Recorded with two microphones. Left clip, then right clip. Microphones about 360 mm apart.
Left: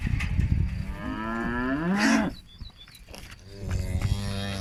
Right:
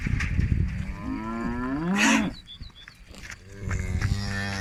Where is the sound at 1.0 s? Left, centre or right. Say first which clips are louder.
Left 2 dB; left.